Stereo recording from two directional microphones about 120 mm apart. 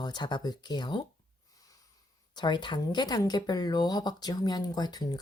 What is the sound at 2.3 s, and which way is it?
Speech, 40° left (ahead or behind).